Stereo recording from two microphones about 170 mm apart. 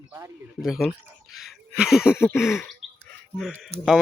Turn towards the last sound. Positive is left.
turn(degrees=0)  # may be behind; listen again after turning